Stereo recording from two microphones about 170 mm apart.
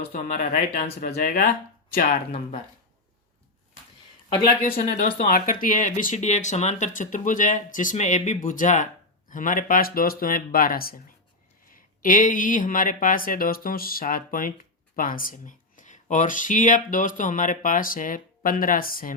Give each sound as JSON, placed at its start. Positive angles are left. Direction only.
{"t": 0.1, "sound": "speech", "side_deg": 50}
{"t": 0.9, "sound": "speech", "side_deg": 60}
{"t": 4.4, "sound": "speech", "side_deg": 45}
{"t": 5.2, "sound": "speech", "side_deg": 60}